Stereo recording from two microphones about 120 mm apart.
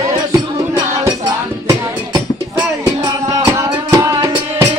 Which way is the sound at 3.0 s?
30° right (ahead or behind).